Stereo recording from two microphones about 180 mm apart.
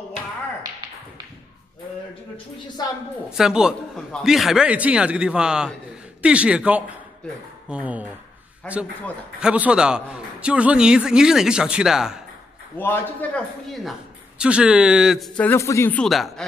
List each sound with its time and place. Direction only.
2.8 s a woman's voice: 20° left (ahead or behind)
3.3 s a man's voice: 5° right (ahead or behind)
8.6 s a man's voice: 10° left (ahead or behind)
9.4 s a man's voice: 5° right (ahead or behind)
12.7 s a man's voice: 10° left (ahead or behind)